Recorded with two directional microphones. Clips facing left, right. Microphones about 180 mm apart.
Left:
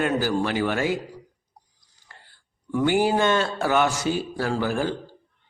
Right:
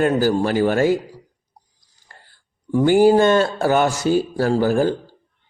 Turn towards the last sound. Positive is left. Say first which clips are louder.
# right 7 dB
turn(degrees=-40)  # may be behind; listen again after turning